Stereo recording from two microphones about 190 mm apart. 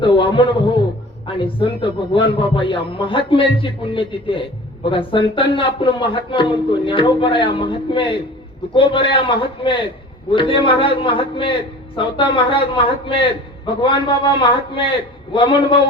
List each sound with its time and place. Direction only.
0.0 s a man's voice: 25° left (ahead or behind)